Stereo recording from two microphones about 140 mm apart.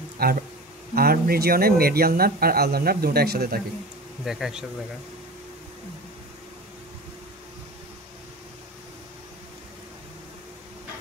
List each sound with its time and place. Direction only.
0.2 s speech: 90° right
4.2 s speech: 5° right (ahead or behind)